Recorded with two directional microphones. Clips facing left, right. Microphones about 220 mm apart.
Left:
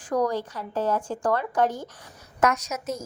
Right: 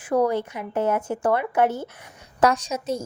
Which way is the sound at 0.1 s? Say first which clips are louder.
Right 4 dB; 10° right (ahead or behind).